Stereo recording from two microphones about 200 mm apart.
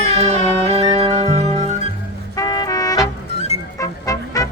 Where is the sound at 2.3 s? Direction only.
20° left (ahead or behind).